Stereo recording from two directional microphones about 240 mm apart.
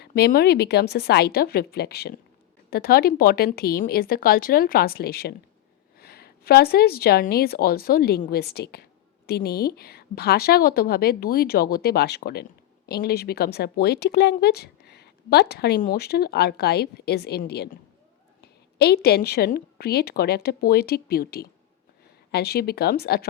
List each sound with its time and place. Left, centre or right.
0.0 s speech: left
19.0 s speech: left